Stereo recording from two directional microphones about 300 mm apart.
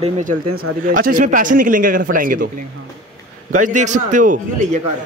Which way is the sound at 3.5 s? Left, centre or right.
Right.